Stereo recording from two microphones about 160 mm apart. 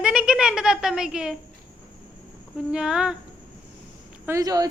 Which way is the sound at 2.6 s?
5° right (ahead or behind).